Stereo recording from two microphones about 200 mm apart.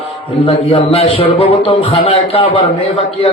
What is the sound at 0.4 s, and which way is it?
A man's voice, 25° left (ahead or behind).